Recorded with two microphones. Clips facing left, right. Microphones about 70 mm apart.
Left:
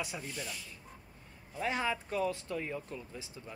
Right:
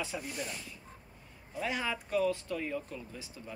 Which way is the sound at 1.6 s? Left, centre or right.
Left.